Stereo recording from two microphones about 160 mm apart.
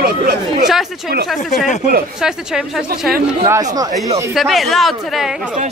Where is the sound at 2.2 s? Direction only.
5° right (ahead or behind).